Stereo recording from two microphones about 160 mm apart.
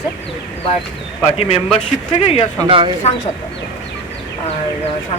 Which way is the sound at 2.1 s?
40° left (ahead or behind).